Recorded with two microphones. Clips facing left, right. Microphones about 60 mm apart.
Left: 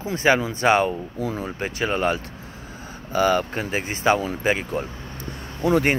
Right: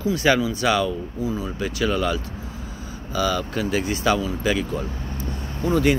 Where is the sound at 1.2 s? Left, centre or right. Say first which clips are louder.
Right 1 dB; left.